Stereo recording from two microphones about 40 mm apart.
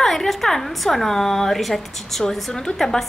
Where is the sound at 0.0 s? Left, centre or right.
Centre.